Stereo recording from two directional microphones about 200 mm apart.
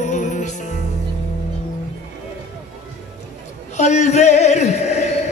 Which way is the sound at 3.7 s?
35° left (ahead or behind).